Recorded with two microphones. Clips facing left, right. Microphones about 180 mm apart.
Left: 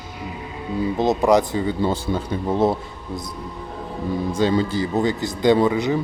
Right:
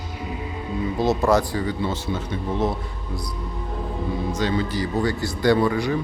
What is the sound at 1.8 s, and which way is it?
Speech, 35° left (ahead or behind).